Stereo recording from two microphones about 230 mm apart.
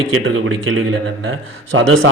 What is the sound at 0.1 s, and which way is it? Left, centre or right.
A man's voice, right.